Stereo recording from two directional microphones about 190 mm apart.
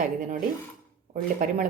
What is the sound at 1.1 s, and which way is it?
Speech, 40° right (ahead or behind).